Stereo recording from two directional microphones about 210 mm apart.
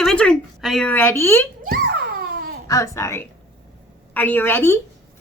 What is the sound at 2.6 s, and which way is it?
A woman's voice, 15° left (ahead or behind).